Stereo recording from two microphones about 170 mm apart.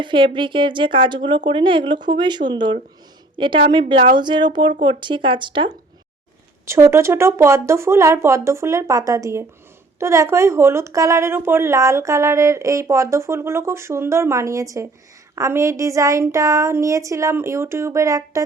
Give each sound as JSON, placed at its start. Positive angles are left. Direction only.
{"t": 0.0, "sound": "a woman's voice", "side_deg": -30}
{"t": 6.7, "sound": "a woman's voice", "side_deg": -15}